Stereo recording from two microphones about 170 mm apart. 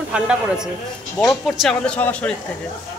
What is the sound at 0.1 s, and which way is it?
Speech, 5° right (ahead or behind).